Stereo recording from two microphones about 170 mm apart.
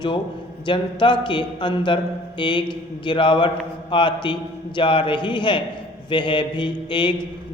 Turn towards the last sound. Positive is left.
turn(degrees=30)  # may be behind; listen again after turning